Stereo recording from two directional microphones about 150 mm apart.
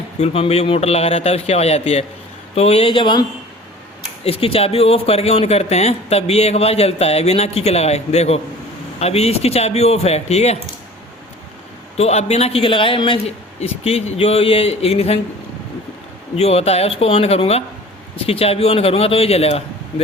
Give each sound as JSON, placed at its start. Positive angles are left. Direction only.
{"t": 0.2, "sound": "a man's voice", "side_deg": 45}
{"t": 11.9, "sound": "a man's voice", "side_deg": 45}
{"t": 16.3, "sound": "speech", "side_deg": 45}